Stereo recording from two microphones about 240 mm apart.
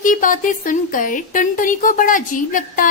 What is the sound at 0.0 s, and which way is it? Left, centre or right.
Speech, left.